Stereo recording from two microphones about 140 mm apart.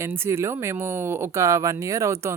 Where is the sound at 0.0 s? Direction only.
20° right (ahead or behind).